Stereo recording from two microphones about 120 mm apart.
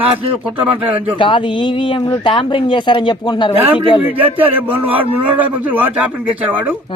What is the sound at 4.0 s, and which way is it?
A man's voice, 15° right (ahead or behind).